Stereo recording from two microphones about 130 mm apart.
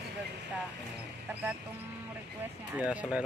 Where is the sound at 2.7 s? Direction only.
10° right (ahead or behind).